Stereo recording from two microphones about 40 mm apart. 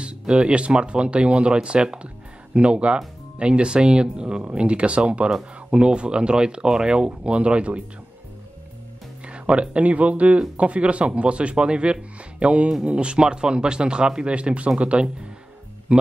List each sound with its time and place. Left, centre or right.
0.0 s speech: right
9.2 s speech: right